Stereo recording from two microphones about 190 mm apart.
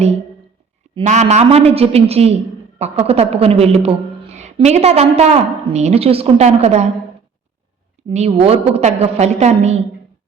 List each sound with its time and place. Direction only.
0.9 s a woman's voice: 35° right (ahead or behind)
8.1 s a woman's voice: 35° right (ahead or behind)